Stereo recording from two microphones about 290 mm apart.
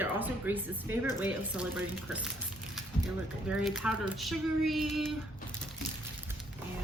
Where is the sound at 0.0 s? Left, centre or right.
Centre.